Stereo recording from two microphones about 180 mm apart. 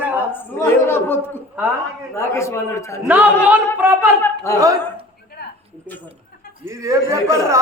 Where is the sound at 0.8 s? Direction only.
10° left (ahead or behind).